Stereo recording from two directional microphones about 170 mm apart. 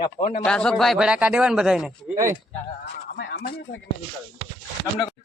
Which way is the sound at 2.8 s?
85° left.